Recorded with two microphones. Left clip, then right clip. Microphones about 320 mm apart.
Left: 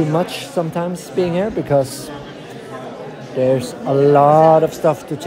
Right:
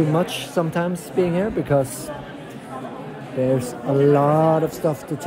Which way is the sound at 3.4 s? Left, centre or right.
Centre.